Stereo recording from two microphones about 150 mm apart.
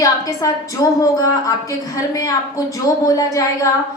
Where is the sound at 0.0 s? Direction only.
20° left (ahead or behind).